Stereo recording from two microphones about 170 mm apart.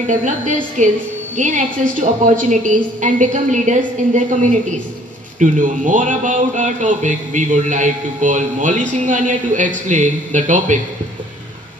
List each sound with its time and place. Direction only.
0.0 s a woman's voice: 45° right (ahead or behind)